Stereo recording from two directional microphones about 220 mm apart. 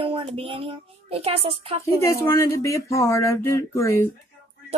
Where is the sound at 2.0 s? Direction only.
10° left (ahead or behind).